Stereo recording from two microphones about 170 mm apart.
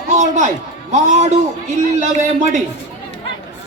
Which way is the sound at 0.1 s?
45° right (ahead or behind).